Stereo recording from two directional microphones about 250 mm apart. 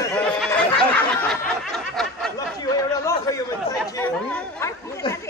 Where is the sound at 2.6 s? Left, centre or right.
Centre.